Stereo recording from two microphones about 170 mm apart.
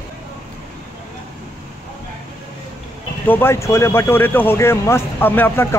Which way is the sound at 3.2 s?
10° left (ahead or behind).